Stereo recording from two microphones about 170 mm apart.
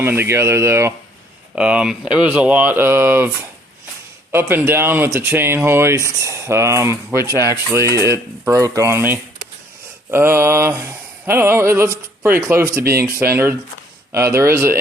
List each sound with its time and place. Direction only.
0.0 s speech: 10° right (ahead or behind)
10.1 s a sound: 15° right (ahead or behind)
12.5 s speech: 15° right (ahead or behind)